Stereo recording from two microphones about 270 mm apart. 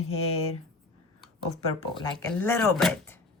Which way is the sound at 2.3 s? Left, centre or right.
Centre.